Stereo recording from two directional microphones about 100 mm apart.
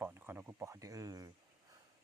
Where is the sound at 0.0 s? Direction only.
25° right (ahead or behind).